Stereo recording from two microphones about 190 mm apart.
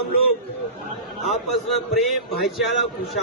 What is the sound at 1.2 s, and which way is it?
A man's voice, centre (ahead or behind).